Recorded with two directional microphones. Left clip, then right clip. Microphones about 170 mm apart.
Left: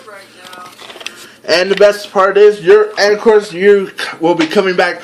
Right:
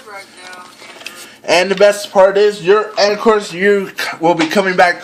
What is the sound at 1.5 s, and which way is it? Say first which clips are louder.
Speech: left 1 dB; 35° right (ahead or behind).